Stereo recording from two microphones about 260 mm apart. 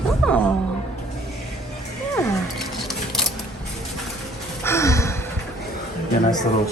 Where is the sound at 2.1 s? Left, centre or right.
Centre.